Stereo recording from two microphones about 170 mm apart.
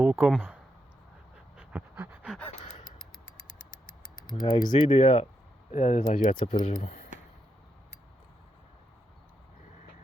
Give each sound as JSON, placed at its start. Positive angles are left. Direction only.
{"t": 0.0, "sound": "speech", "side_deg": -10}
{"t": 1.5, "sound": "pant", "side_deg": -10}
{"t": 4.3, "sound": "speech", "side_deg": 25}
{"t": 4.9, "sound": "speech", "side_deg": 40}
{"t": 6.7, "sound": "speech", "side_deg": 55}